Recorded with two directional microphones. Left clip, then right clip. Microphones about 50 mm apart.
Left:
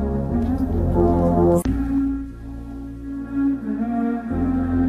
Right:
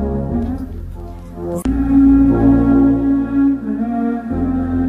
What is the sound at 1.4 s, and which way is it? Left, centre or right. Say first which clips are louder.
Music: left 2 dB; centre.